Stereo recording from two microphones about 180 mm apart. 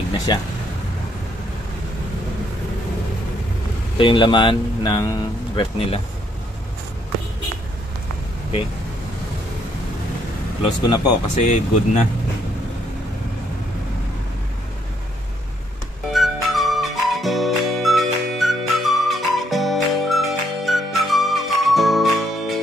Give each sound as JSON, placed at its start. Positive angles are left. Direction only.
{"t": 0.3, "sound": "speech", "side_deg": 25}
{"t": 4.0, "sound": "speech", "side_deg": 30}
{"t": 10.6, "sound": "speech", "side_deg": 35}
{"t": 16.1, "sound": "music", "side_deg": 0}